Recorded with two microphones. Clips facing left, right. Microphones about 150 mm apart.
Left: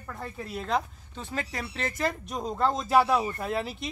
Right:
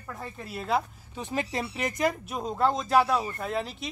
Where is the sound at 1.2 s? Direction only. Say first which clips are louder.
Right 4 dB; 20° right (ahead or behind).